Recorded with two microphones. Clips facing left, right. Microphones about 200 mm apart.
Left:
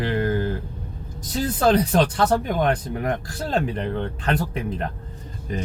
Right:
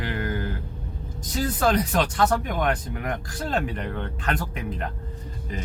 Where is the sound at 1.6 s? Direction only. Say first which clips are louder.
Left 5 dB; 30° left (ahead or behind).